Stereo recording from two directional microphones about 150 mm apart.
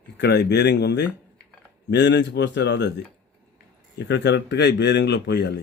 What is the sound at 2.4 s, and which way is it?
Speech, 90° left.